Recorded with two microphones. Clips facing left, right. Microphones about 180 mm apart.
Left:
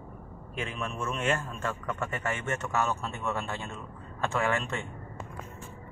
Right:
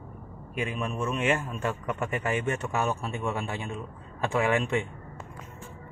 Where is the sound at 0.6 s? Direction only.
15° right (ahead or behind).